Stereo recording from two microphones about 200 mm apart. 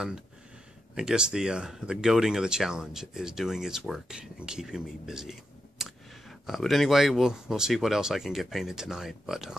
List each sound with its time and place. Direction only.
0.9 s speech: 5° right (ahead or behind)